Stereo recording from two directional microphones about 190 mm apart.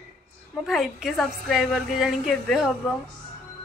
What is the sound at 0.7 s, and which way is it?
A woman's voice, centre (ahead or behind).